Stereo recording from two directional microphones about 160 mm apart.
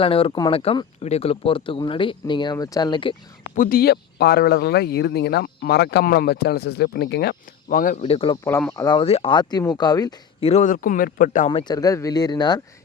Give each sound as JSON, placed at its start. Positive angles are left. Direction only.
{"t": 0.0, "sound": "speech", "side_deg": 35}
{"t": 3.5, "sound": "speech", "side_deg": 60}
{"t": 8.0, "sound": "speech", "side_deg": 35}
{"t": 8.4, "sound": "speech", "side_deg": 15}
{"t": 10.4, "sound": "a man's voice", "side_deg": 45}
{"t": 11.7, "sound": "speech", "side_deg": 20}